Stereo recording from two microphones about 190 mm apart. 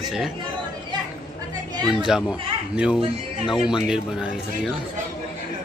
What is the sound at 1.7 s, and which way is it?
Chatter, 20° right (ahead or behind).